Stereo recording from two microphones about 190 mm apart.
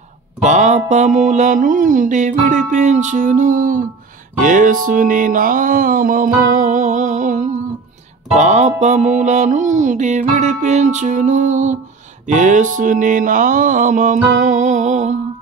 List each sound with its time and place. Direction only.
0.4 s mantra: 40° right (ahead or behind)
4.4 s music: 45° right (ahead or behind)
8.4 s mantra: 40° right (ahead or behind)
12.7 s music: 40° right (ahead or behind)